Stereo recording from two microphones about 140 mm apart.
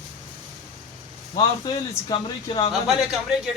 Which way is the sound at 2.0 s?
35° left (ahead or behind).